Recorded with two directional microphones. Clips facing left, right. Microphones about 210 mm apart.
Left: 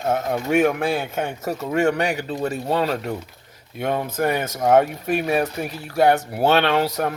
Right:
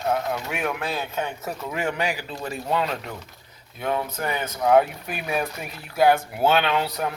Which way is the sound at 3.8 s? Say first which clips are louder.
Left 4 dB; 45° left (ahead or behind).